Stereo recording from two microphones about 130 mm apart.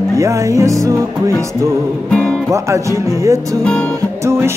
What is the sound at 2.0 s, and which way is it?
Music, 5° left (ahead or behind).